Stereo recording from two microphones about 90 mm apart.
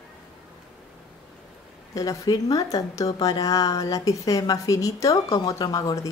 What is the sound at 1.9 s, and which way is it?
A woman's voice, 45° left (ahead or behind).